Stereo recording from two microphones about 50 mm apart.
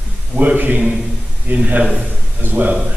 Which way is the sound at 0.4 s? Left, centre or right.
Right.